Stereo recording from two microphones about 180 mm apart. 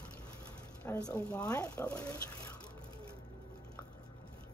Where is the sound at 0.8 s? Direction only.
10° left (ahead or behind).